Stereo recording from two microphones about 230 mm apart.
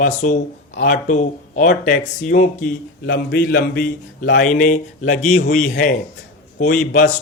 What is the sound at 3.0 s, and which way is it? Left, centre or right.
A man's voice, left.